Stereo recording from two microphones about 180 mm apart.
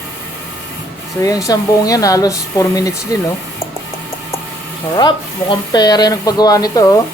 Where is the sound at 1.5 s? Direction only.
20° left (ahead or behind).